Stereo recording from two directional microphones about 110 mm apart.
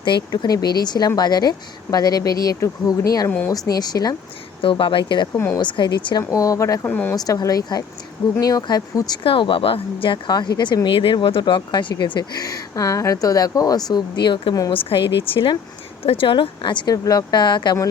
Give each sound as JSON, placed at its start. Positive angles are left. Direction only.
{"t": 0.0, "sound": "speech", "side_deg": 40}
{"t": 3.2, "sound": "speech", "side_deg": 15}
{"t": 3.7, "sound": "speech", "side_deg": 35}
{"t": 4.6, "sound": "speech", "side_deg": 50}
{"t": 6.3, "sound": "speech", "side_deg": 30}
{"t": 6.8, "sound": "speech", "side_deg": 15}
{"t": 7.2, "sound": "speech", "side_deg": 35}
{"t": 9.2, "sound": "speech", "side_deg": 55}
{"t": 14.8, "sound": "speech", "side_deg": 55}